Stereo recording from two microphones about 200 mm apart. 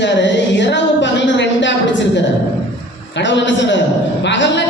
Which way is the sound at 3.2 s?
65° left (ahead or behind).